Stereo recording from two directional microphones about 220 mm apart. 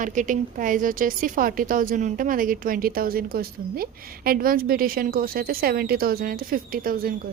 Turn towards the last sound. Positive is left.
turn(degrees=-40)  # may be behind; listen again after turning